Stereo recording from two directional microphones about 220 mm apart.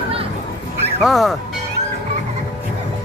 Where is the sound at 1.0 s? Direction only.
Centre (ahead or behind).